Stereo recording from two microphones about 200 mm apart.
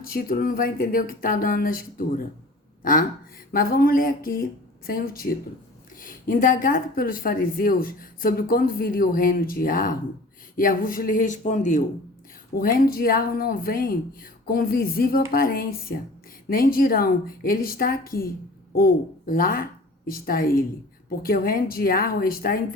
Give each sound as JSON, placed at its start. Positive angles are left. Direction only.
{"t": 0.0, "sound": "speech", "side_deg": 50}